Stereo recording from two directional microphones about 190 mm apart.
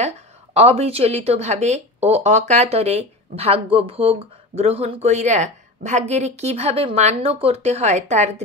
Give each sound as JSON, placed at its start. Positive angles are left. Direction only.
{"t": 0.6, "sound": "speech", "side_deg": -35}